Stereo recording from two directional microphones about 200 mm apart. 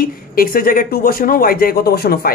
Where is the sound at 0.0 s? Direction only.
45° left (ahead or behind).